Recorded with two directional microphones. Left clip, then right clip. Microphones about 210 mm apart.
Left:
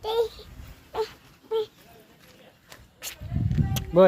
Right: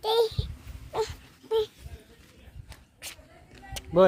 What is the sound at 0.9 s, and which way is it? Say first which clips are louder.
Wail: even; 40° right (ahead or behind).